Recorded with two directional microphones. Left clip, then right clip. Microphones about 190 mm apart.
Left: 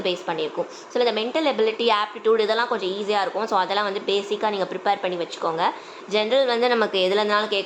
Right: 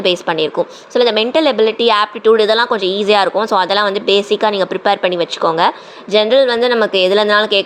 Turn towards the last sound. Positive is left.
turn(degrees=-25)  # may be behind; listen again after turning